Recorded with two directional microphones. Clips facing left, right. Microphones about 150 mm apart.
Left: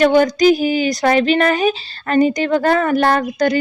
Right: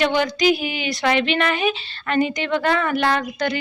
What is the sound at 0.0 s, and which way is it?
Speech, 45° left (ahead or behind).